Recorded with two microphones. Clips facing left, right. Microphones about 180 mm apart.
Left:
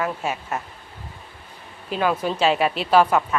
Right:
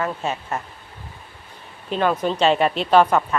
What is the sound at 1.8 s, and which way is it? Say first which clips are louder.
Speech: right 2 dB; 5° left (ahead or behind).